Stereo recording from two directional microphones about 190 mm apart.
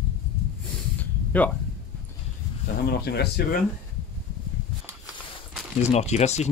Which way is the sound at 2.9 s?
60° left (ahead or behind).